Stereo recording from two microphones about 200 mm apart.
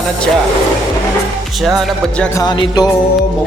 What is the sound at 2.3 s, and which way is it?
Speech, 20° left (ahead or behind).